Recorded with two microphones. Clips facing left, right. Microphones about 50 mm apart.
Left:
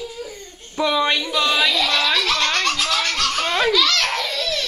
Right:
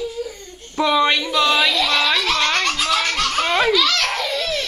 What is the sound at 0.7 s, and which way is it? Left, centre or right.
Music, centre.